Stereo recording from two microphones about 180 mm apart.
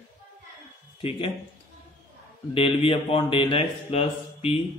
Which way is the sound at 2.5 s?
30° left (ahead or behind).